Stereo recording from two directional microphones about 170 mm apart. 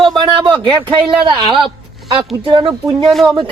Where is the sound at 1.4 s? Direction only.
Centre (ahead or behind).